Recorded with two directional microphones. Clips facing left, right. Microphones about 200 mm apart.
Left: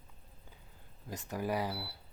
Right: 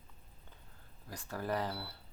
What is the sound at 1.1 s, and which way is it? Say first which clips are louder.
Speech: left 2 dB; 20° left (ahead or behind).